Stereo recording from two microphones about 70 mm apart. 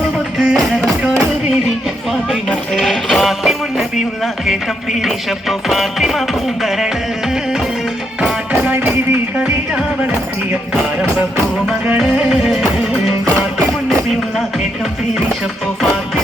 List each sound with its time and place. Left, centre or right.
0.3 s music: centre
2.5 s music: centre
8.6 s music: right
11.9 s music: centre